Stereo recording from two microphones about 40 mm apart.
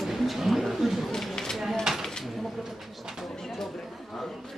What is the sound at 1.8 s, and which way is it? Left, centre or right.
Speech, centre.